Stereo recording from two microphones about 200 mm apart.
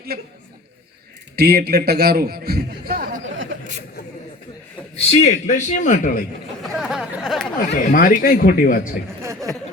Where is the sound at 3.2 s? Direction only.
75° right (ahead or behind).